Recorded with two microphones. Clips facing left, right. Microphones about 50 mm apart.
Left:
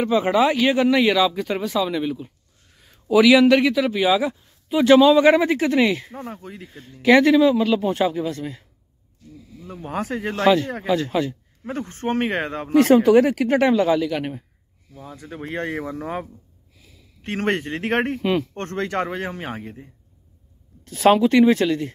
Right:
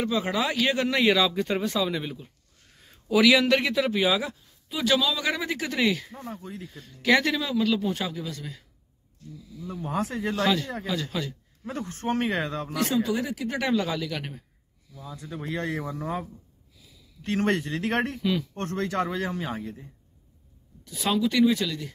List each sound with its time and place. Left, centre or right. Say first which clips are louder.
0.3 s speech: left 8 dB; centre
0.7 s a man's voice: left 5 dB; centre
4.3 s speech: left 12 dB; left
6.2 s speech: left 3 dB; left
6.7 s speech: left 7 dB; left
9.6 s speech: left 1 dB; left
10.4 s speech: left 9 dB; left
12.8 s speech: left 12 dB; left
13.6 s speech: left 7 dB; left
14.9 s speech: left 2 dB; left
18.5 s speech: left 3 dB; left
20.8 s speech: left 10 dB; left